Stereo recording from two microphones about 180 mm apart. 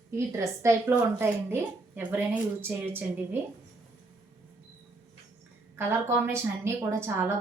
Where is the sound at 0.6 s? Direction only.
15° right (ahead or behind).